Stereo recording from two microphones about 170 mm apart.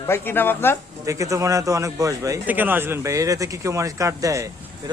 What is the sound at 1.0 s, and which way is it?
A man's voice, 20° right (ahead or behind).